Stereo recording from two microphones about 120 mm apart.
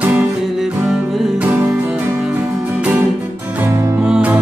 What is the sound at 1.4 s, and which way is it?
Music, 20° right (ahead or behind).